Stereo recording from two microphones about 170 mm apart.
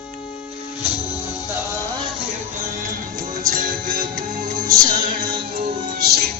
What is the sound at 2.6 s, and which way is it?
Music, 50° right (ahead or behind).